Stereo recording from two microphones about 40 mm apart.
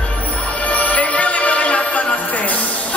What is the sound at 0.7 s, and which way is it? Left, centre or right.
Music, left.